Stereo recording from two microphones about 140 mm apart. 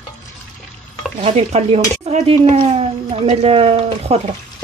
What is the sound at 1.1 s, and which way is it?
Speech, 45° right (ahead or behind).